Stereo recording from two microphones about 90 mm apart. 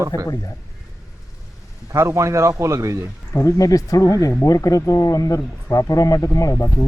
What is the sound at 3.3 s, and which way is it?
Speech, 40° left (ahead or behind).